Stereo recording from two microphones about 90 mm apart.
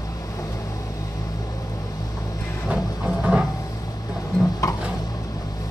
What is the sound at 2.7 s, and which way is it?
Music, 10° right (ahead or behind).